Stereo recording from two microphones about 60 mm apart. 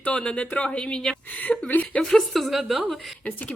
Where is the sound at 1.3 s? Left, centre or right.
Left.